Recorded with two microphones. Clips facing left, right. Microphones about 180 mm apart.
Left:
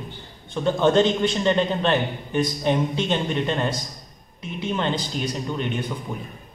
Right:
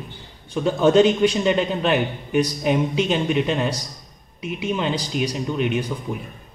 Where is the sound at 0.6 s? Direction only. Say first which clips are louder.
Right 3 dB; 10° right (ahead or behind).